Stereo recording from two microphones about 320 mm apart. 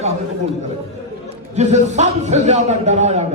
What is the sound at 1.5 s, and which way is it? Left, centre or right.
A man's voice, right.